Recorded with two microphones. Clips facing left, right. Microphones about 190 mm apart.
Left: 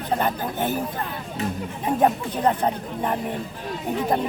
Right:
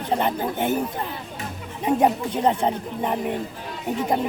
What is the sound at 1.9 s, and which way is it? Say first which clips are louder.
Speech: right 1 dB; 20° right (ahead or behind).